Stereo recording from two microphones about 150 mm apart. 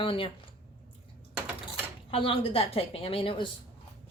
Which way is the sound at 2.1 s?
40° left (ahead or behind).